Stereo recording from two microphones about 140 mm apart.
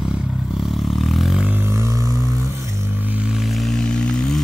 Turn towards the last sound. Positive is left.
turn(degrees=5)  # may be behind; listen again after turning